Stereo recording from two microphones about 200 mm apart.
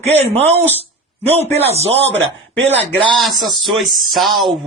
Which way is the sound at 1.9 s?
65° right (ahead or behind).